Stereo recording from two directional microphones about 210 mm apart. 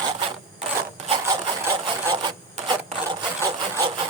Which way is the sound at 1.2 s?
20° right (ahead or behind).